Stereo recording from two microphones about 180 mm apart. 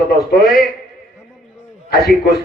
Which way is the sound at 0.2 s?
Centre (ahead or behind).